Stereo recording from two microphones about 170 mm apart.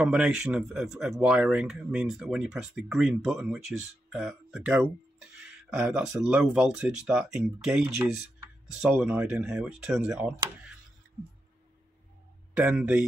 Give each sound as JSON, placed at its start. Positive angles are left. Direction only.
{"t": 0.0, "sound": "speech", "side_deg": -5}
{"t": 12.5, "sound": "speech", "side_deg": -10}